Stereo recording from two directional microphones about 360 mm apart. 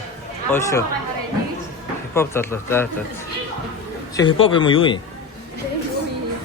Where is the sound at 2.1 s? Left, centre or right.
Centre.